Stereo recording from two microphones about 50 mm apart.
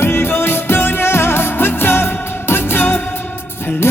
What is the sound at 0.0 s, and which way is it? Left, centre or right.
Music, left.